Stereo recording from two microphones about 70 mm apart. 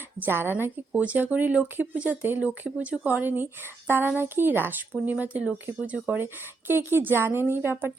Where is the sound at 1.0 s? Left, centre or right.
Right.